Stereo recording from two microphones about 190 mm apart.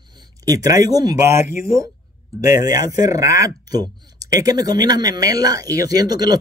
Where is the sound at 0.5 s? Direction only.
20° right (ahead or behind).